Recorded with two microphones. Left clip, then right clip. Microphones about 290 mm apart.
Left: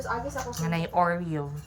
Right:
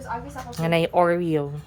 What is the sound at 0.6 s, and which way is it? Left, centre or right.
Speech, centre.